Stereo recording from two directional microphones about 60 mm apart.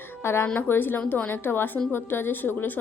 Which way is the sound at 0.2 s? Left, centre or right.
Left.